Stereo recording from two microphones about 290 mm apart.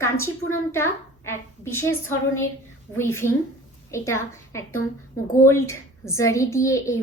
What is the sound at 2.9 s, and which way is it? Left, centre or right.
A child's voice, centre.